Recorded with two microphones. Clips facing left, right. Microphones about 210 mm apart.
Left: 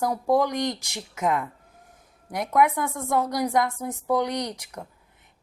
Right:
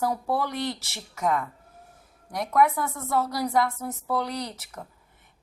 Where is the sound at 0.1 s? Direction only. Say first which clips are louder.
Left 5 dB; 15° left (ahead or behind).